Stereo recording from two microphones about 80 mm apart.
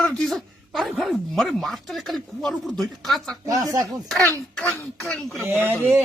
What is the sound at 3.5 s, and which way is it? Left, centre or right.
Speech, right.